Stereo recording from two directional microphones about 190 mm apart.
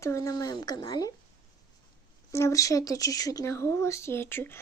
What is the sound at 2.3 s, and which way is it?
Speech, 15° left (ahead or behind).